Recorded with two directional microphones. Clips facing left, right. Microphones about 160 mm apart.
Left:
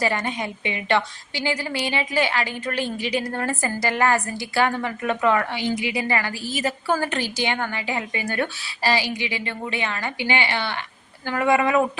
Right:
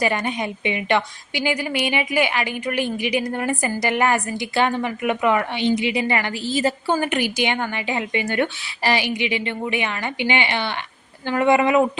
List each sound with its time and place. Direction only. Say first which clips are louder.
0.0 s a woman's voice: right 2 dB; 15° right (ahead or behind)